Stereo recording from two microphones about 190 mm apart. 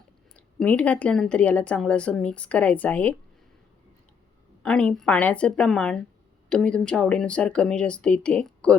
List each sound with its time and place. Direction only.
0.3 s a woman's voice: 5° left (ahead or behind)
4.6 s speech: 5° left (ahead or behind)